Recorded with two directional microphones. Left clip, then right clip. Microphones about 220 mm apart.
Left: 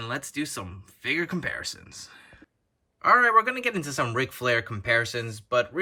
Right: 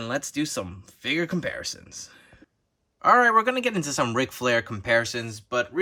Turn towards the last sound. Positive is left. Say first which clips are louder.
# left 2 dB
turn(degrees=-5)  # may be behind; listen again after turning